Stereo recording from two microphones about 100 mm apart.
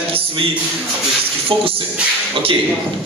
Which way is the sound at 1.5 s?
60° right (ahead or behind).